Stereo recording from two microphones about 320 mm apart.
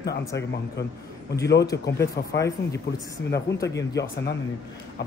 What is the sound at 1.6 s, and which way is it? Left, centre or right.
Speech, centre.